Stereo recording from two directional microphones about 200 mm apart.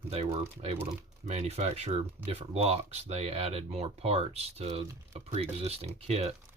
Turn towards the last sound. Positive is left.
turn(degrees=-30)  # may be behind; listen again after turning